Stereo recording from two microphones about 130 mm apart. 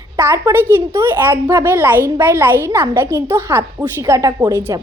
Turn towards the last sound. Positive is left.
turn(degrees=-25)  # may be behind; listen again after turning